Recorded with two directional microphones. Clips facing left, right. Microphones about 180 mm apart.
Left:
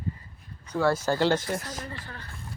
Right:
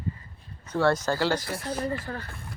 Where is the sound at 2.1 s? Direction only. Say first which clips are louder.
Right 9 dB; 40° right (ahead or behind).